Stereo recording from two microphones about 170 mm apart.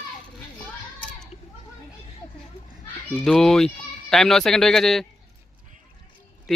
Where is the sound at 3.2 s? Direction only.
5° left (ahead or behind).